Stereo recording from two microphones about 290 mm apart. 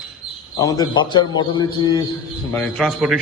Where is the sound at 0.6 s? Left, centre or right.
Centre.